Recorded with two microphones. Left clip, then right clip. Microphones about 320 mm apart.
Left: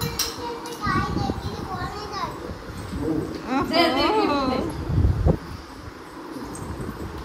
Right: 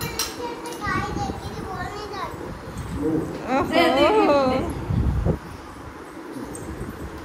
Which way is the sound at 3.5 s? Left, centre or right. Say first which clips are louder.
Right 3 dB; centre.